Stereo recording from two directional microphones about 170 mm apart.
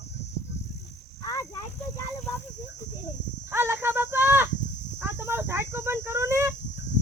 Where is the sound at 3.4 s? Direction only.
15° right (ahead or behind).